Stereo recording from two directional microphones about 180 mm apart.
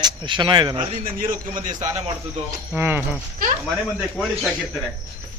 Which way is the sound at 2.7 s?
10° right (ahead or behind).